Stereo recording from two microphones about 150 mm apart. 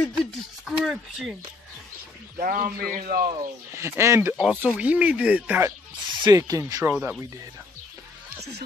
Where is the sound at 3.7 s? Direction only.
15° right (ahead or behind).